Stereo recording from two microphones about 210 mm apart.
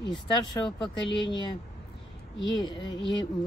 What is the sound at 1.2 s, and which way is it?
Speech, 20° left (ahead or behind).